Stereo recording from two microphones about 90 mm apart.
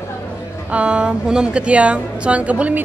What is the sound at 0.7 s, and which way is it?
A woman's voice, 15° right (ahead or behind).